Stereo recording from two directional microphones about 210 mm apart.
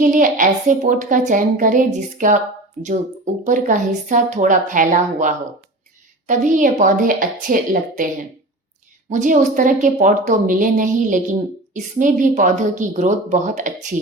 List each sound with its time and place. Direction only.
0.0 s a woman's voice: 40° right (ahead or behind)
3.4 s a woman's voice: 35° right (ahead or behind)